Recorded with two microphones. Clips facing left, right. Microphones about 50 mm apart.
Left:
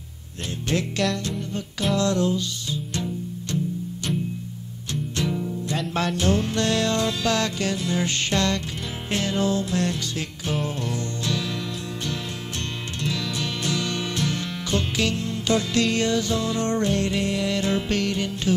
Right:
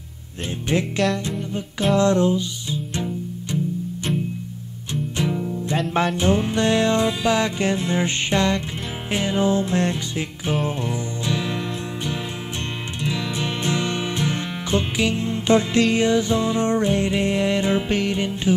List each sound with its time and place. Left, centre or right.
0.9 s music: centre
2.0 s music: right
5.1 s music: centre
13.0 s music: right